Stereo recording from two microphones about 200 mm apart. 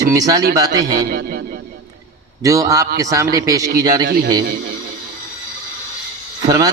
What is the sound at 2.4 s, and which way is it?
A man's voice, 15° right (ahead or behind).